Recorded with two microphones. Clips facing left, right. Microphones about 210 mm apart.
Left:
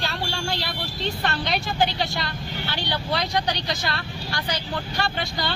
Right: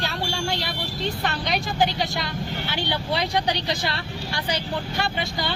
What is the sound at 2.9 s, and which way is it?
Speech, 15° right (ahead or behind).